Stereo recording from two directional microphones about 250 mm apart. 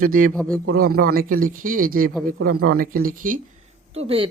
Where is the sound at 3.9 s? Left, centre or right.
Right.